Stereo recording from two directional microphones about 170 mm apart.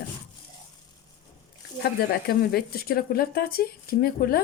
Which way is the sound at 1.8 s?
70° left (ahead or behind).